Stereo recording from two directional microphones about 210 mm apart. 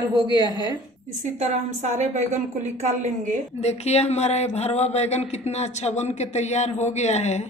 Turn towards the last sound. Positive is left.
turn(degrees=30)  # may be behind; listen again after turning